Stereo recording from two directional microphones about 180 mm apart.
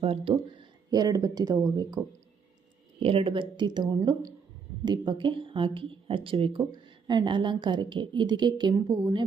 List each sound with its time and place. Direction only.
0.0 s speech: 30° right (ahead or behind)
3.0 s speech: 30° right (ahead or behind)